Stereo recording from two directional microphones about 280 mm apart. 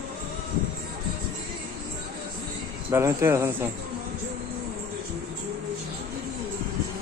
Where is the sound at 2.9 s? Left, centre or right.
Centre.